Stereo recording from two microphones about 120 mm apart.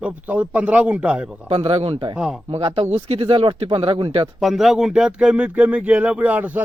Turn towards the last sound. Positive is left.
turn(degrees=-15)  # may be behind; listen again after turning